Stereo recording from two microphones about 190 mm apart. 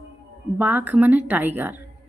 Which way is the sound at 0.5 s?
10° right (ahead or behind).